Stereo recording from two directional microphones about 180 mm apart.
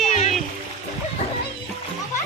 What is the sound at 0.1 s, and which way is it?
Music, 40° left (ahead or behind).